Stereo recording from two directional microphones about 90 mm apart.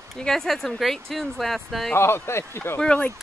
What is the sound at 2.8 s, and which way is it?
Speech, 10° left (ahead or behind).